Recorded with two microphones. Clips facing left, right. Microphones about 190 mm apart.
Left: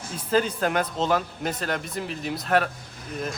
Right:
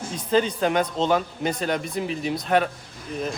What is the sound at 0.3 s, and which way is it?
A man's voice, 5° left (ahead or behind).